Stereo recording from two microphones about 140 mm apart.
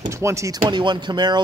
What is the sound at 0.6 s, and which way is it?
Speech, 35° right (ahead or behind).